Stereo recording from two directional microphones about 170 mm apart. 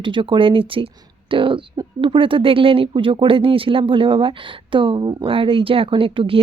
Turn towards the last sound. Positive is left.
turn(degrees=-30)  # may be behind; listen again after turning